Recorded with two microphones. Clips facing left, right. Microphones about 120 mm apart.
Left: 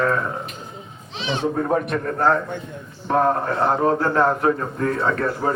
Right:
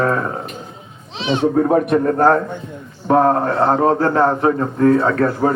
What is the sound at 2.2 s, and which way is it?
A man's voice, 40° right (ahead or behind).